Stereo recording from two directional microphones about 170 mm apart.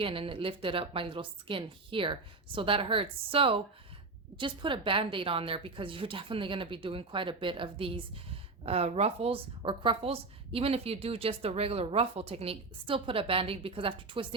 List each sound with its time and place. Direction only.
0.0 s a woman's voice: 30° right (ahead or behind)